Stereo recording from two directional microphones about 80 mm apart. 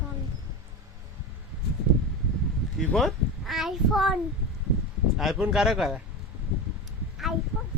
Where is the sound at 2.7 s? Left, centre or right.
Centre.